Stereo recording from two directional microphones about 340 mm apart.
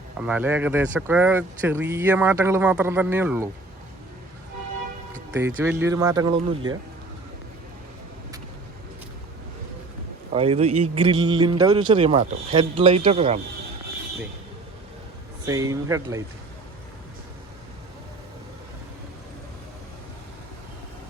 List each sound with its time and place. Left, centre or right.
0.2 s speech: centre
5.3 s a man's voice: centre
10.3 s a man's voice: centre
15.4 s a man's voice: centre